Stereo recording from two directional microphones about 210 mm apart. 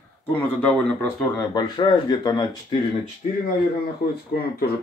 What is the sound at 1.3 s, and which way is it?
Speech, 20° left (ahead or behind).